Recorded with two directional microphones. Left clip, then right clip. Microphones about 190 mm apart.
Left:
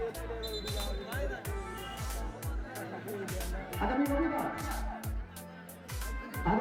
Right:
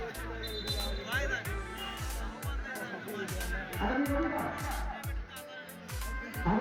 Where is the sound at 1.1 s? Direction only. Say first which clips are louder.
Right 7 dB; 35° left (ahead or behind).